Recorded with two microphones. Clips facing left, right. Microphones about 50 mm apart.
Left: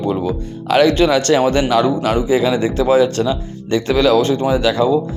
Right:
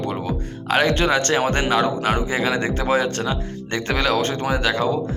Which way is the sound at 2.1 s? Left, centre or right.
Right.